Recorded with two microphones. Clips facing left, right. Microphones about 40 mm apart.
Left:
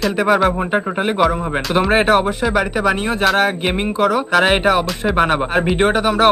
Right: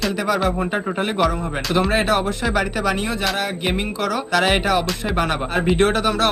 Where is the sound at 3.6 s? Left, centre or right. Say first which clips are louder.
Left 5 dB; left.